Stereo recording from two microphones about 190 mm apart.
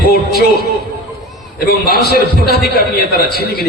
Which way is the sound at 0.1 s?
55° left (ahead or behind).